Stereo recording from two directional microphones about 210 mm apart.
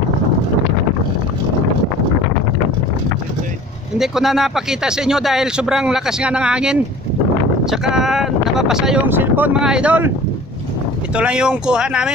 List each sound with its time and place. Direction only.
4.0 s a man's voice: centre (ahead or behind)
11.1 s a man's voice: 5° right (ahead or behind)